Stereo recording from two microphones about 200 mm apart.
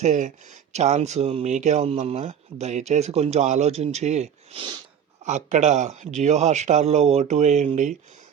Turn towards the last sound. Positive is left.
turn(degrees=-35)  # may be behind; listen again after turning